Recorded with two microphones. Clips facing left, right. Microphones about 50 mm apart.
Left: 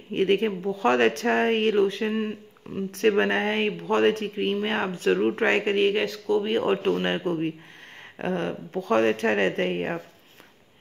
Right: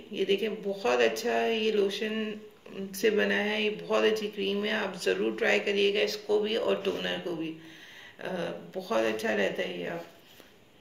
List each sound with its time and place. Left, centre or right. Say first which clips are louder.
0.1 s speech: left 6 dB; left
2.1 s speech: left 5 dB; centre
2.9 s speech: left 4 dB; left
6.6 s speech: left 5 dB; left